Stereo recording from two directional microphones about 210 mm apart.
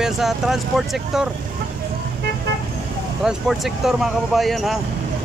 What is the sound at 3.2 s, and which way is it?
Speech, centre (ahead or behind).